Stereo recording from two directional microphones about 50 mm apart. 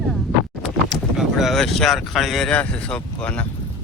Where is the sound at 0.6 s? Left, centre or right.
Centre.